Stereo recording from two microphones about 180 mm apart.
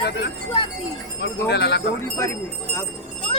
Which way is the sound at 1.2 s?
70° left (ahead or behind).